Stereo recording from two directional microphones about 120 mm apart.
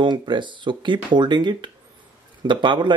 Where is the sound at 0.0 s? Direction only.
40° right (ahead or behind).